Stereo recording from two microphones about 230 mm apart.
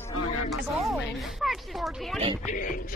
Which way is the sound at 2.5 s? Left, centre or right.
Left.